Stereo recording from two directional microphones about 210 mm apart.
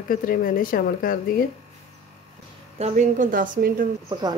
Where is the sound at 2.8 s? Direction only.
35° right (ahead or behind).